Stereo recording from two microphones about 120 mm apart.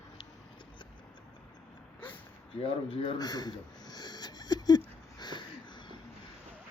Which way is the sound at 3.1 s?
35° left (ahead or behind).